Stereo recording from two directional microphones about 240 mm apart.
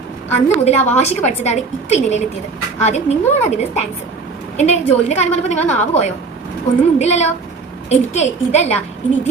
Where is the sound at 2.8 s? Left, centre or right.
Left.